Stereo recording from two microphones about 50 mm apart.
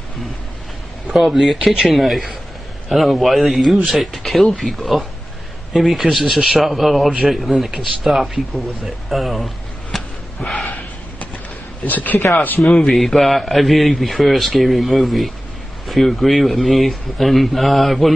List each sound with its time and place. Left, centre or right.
1.1 s a man's voice: centre
9.9 s a sound: centre
11.8 s a man's voice: left
12.8 s a man's voice: centre